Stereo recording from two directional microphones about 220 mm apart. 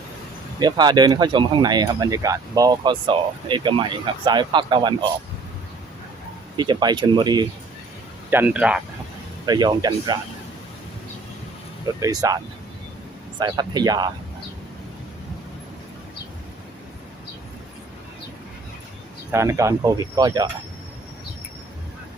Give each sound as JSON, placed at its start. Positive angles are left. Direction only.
{"t": 0.6, "sound": "speech", "side_deg": -20}
{"t": 6.6, "sound": "speech", "side_deg": -20}
{"t": 8.3, "sound": "speech", "side_deg": -10}
{"t": 9.5, "sound": "speech", "side_deg": -15}
{"t": 11.9, "sound": "speech", "side_deg": -15}
{"t": 13.4, "sound": "speech", "side_deg": -20}
{"t": 19.3, "sound": "speech", "side_deg": -15}